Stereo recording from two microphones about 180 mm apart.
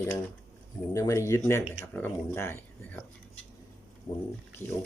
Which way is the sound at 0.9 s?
15° left (ahead or behind).